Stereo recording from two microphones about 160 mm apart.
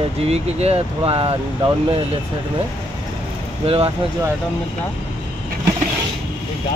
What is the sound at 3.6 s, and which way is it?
Speech, 35° right (ahead or behind).